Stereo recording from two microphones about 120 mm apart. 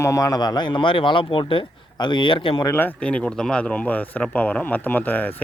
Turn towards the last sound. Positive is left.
turn(degrees=15)  # may be behind; listen again after turning